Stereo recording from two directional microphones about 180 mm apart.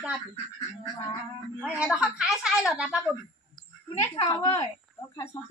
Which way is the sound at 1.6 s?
5° right (ahead or behind).